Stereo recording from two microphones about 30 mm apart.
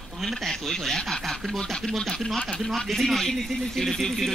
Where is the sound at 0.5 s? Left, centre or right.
Centre.